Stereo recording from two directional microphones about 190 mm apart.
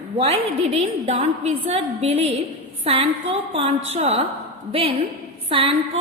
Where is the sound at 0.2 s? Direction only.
30° right (ahead or behind).